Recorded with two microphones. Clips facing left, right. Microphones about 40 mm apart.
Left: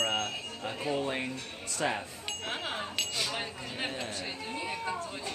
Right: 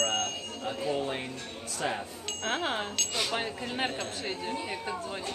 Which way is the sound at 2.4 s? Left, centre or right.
Centre.